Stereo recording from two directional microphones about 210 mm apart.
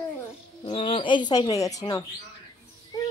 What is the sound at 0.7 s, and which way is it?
Speech, 25° left (ahead or behind).